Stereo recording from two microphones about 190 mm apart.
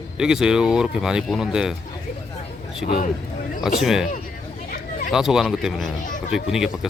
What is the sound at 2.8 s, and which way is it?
Speech, 45° left (ahead or behind).